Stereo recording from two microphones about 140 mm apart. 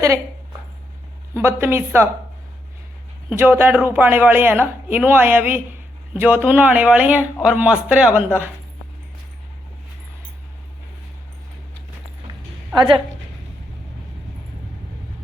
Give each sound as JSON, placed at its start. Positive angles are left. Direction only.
{"t": 1.3, "sound": "a woman's voice", "side_deg": -15}
{"t": 3.2, "sound": "a woman's voice", "side_deg": -15}